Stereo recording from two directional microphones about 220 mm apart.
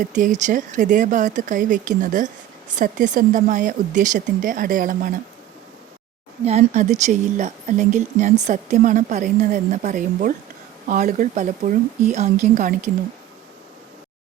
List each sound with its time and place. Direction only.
0.0 s speech: 35° right (ahead or behind)
6.4 s speech: 30° right (ahead or behind)